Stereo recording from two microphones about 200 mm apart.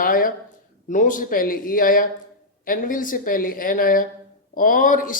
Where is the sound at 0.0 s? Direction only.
45° left (ahead or behind).